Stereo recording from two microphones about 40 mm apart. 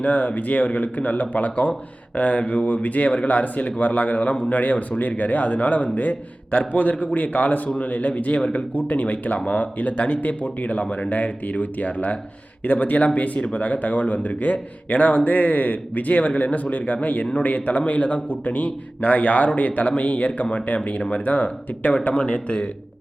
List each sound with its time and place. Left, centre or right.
0.0 s speech: left
8.4 s speech: left
8.7 s speech: left